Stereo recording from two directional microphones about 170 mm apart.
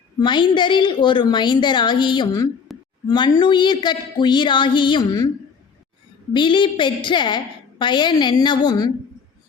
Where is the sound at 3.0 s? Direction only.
25° left (ahead or behind).